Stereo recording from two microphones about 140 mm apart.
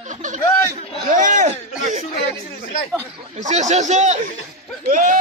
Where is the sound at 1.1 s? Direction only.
65° right (ahead or behind).